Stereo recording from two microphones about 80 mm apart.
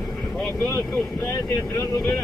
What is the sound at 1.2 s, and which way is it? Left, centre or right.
Speech, left.